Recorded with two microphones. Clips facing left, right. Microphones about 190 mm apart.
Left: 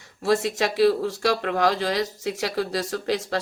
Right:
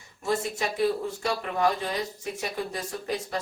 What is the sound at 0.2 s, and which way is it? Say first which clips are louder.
Speech: left 6 dB; 85° left.